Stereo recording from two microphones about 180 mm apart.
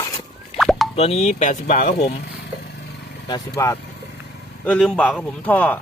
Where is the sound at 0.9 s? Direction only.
35° left (ahead or behind).